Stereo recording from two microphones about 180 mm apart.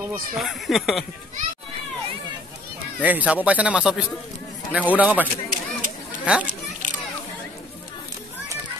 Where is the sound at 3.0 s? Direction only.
10° right (ahead or behind).